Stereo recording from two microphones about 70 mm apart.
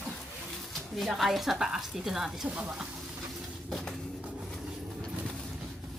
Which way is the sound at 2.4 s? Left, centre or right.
Centre.